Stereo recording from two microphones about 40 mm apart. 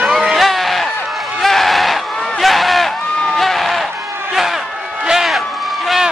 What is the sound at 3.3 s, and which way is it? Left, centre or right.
Sheep, centre.